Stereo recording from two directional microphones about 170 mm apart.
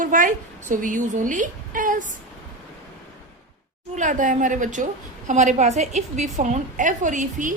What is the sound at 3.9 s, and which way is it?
A man's voice, 50° right (ahead or behind).